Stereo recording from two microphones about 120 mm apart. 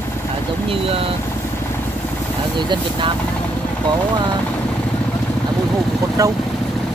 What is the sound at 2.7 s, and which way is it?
Speech, 45° right (ahead or behind).